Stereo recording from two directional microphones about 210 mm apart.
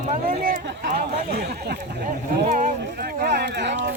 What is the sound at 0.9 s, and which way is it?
Speech, 50° right (ahead or behind).